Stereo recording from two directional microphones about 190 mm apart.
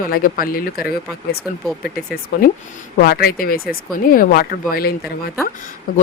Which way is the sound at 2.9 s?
50° left (ahead or behind).